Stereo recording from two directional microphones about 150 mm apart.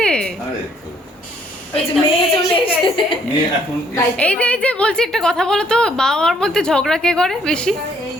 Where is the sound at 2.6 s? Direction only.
35° left (ahead or behind).